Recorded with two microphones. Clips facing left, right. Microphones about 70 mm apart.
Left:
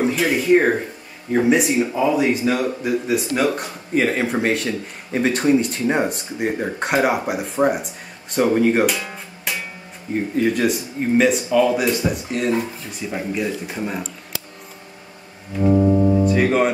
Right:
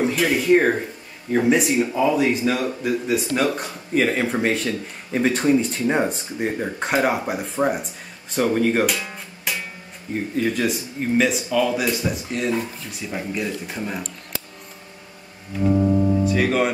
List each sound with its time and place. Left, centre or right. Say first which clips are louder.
0.0 s speech: left 1 dB; centre
8.8 s music: left 2 dB; centre
10.3 s speech: left 3 dB; centre
15.5 s music: left 3 dB; centre
16.3 s music: left 3 dB; centre